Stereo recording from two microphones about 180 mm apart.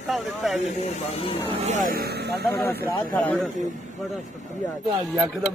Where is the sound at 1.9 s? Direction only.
60° right (ahead or behind).